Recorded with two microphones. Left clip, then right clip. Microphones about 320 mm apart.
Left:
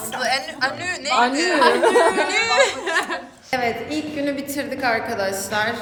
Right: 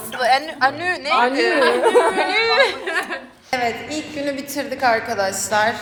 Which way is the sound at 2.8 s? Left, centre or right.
Left.